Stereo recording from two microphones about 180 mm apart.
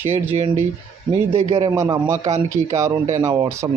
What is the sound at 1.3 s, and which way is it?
Speech, 30° right (ahead or behind).